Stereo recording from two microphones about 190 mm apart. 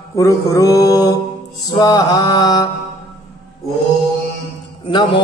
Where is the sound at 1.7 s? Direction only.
20° left (ahead or behind).